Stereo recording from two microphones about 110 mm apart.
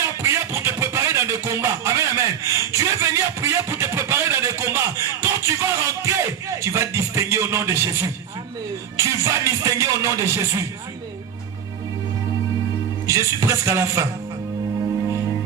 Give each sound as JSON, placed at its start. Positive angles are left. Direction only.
{"t": 0.2, "sound": "a sound", "side_deg": -25}
{"t": 9.0, "sound": "music", "side_deg": -25}
{"t": 13.1, "sound": "music", "side_deg": -25}